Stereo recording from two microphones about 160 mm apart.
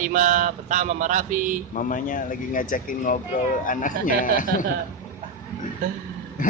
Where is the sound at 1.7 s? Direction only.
55° left (ahead or behind).